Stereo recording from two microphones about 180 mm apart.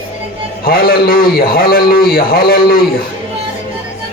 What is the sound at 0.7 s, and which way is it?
A man's voice, 55° left (ahead or behind).